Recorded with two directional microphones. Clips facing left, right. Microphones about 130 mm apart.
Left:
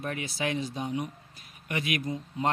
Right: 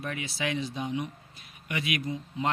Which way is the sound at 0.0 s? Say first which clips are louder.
Left 1 dB; 40° left (ahead or behind).